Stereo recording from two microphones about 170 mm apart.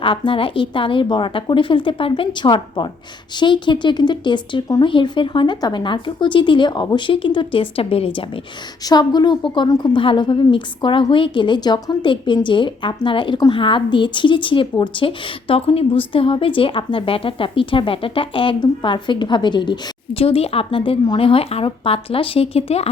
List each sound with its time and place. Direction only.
0.0 s a woman's voice: 30° left (ahead or behind)